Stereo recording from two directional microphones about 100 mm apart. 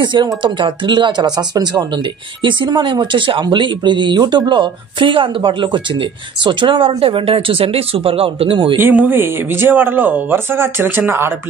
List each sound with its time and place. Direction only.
0.0 s speech: 50° right (ahead or behind)
6.9 s speech: 65° right (ahead or behind)
8.7 s speech: 20° right (ahead or behind)